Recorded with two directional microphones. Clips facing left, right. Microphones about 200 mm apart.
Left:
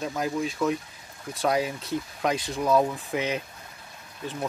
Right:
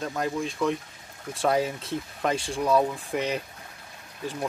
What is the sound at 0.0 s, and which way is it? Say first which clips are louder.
Speech: left 1 dB; 5° left (ahead or behind).